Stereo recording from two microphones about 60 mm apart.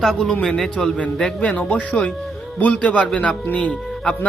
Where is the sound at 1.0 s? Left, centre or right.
Centre.